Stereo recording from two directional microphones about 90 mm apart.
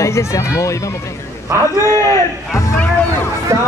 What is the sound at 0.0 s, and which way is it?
Speech, 30° left (ahead or behind).